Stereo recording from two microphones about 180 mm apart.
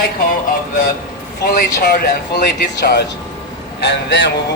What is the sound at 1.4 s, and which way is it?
Speech, 50° left (ahead or behind).